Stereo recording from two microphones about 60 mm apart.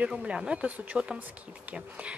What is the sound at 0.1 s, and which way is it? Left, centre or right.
A woman's voice, centre.